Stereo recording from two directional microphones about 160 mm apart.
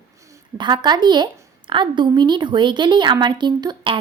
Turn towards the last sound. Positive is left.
turn(degrees=-30)  # may be behind; listen again after turning